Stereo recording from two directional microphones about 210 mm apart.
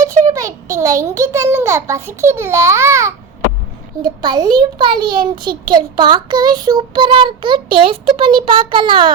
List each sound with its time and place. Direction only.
0.3 s a child's voice: 15° right (ahead or behind)